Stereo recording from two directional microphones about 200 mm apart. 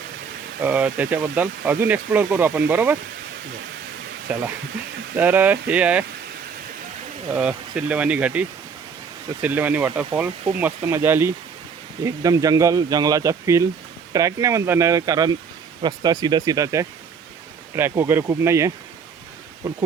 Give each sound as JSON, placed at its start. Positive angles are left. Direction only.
{"t": 0.6, "sound": "speech", "side_deg": -5}
{"t": 4.3, "sound": "speech", "side_deg": -5}
{"t": 7.3, "sound": "speech", "side_deg": -5}